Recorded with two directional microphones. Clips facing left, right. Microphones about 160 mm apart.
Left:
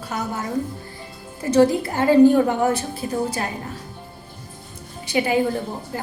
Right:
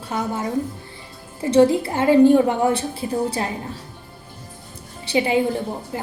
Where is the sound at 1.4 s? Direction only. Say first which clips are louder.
Right 1 dB; 25° right (ahead or behind).